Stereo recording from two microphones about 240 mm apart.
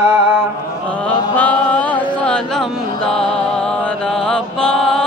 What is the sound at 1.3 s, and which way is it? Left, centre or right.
Chant, centre.